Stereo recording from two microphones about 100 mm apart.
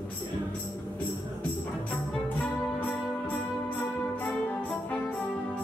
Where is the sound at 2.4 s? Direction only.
15° left (ahead or behind).